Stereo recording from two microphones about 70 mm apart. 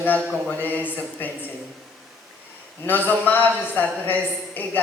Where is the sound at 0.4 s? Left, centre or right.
Left.